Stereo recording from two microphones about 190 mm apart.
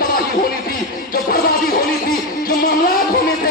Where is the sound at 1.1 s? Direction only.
50° left (ahead or behind).